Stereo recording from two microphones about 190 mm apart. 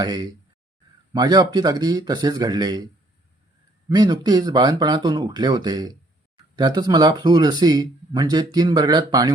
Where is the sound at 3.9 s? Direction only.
20° right (ahead or behind).